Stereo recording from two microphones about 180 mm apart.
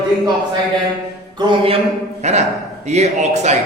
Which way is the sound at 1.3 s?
25° right (ahead or behind).